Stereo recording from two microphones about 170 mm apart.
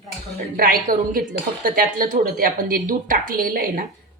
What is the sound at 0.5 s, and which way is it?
A woman's voice, 55° right (ahead or behind).